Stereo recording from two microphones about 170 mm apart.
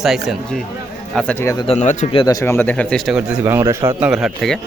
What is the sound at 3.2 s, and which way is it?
Speech, 15° right (ahead or behind).